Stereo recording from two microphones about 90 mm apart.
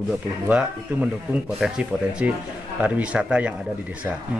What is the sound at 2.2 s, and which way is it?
A man's voice, 15° right (ahead or behind).